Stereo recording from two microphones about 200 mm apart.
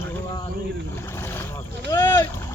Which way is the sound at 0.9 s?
10° left (ahead or behind).